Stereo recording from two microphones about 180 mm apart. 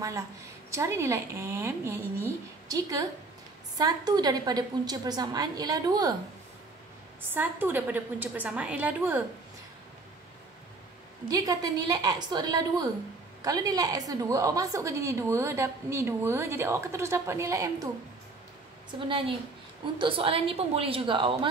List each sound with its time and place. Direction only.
0.7 s a woman's voice: 15° right (ahead or behind)
7.3 s a woman's voice: 10° right (ahead or behind)
11.2 s a woman's voice: 20° right (ahead or behind)
18.9 s a woman's voice: 30° right (ahead or behind)